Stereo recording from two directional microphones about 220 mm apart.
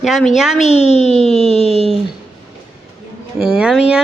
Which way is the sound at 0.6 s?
30° left (ahead or behind).